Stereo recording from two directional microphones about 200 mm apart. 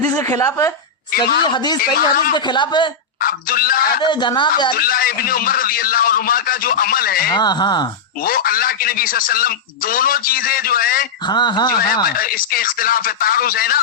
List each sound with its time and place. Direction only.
0.1 s a woman's voice: 10° left (ahead or behind)
1.8 s speech: 45° left (ahead or behind)
2.3 s speech: 20° left (ahead or behind)
3.2 s speech: 45° left (ahead or behind)
4.0 s speech: 20° left (ahead or behind)
4.8 s speech: 45° left (ahead or behind)
7.3 s speech: 20° left (ahead or behind)
8.2 s speech: 45° left (ahead or behind)
11.3 s speech: 20° left (ahead or behind)
12.1 s speech: 45° left (ahead or behind)